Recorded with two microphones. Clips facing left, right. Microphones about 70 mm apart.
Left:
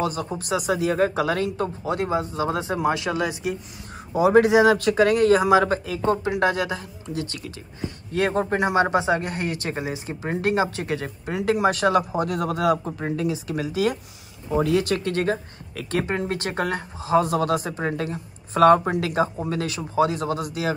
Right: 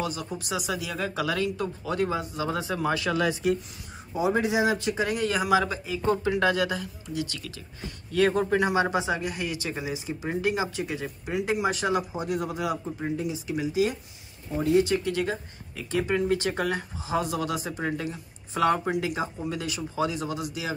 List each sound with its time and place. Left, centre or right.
0.0 s speech: left
3.2 s speech: centre
4.1 s speech: left
6.4 s speech: left
14.6 s speech: left
15.1 s speech: left
15.7 s speech: left
19.3 s speech: left